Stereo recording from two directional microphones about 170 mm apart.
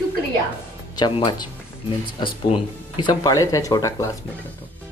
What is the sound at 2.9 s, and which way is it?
Speech, 25° left (ahead or behind).